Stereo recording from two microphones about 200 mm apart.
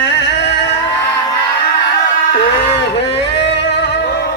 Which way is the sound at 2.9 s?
60° left (ahead or behind).